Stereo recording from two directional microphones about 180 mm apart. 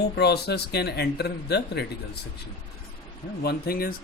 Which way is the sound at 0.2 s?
65° left (ahead or behind).